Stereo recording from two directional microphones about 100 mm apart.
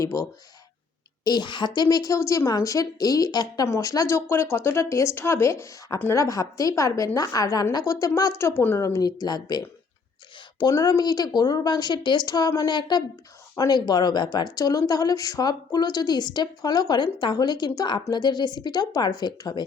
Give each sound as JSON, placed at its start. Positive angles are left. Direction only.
{"t": 0.0, "sound": "speech", "side_deg": 30}
{"t": 1.2, "sound": "speech", "side_deg": 45}